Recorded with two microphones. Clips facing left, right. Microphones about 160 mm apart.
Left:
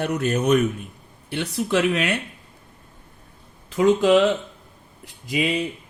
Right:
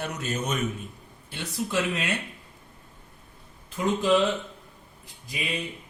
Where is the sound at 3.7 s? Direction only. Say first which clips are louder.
Left 7 dB; 75° left (ahead or behind).